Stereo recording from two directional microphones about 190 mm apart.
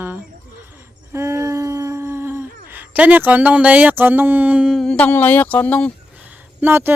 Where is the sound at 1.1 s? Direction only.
15° right (ahead or behind).